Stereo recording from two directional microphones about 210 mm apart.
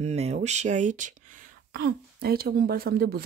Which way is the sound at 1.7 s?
50° right (ahead or behind).